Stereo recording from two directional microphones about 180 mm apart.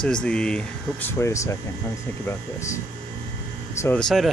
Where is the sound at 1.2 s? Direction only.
15° left (ahead or behind).